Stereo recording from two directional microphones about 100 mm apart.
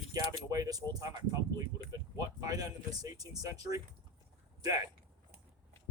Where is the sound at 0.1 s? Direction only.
35° right (ahead or behind).